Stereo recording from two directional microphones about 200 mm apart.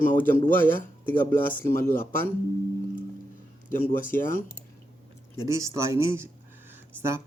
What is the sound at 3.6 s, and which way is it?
Speech, 40° left (ahead or behind).